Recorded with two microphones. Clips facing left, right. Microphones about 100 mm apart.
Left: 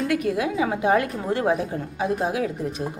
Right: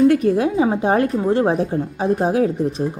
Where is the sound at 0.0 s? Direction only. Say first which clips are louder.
Right 8 dB; 35° right (ahead or behind).